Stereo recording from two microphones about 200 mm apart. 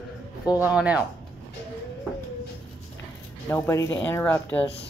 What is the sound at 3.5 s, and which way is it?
Speech, 15° left (ahead or behind).